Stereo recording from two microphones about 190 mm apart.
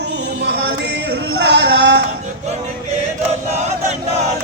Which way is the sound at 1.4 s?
65° right (ahead or behind).